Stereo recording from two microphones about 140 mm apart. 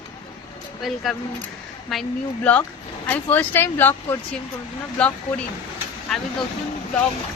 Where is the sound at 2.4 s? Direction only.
10° left (ahead or behind).